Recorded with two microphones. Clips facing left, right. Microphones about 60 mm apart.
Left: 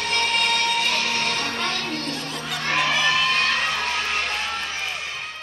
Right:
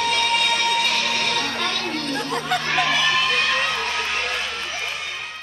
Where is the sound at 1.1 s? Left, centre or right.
Left.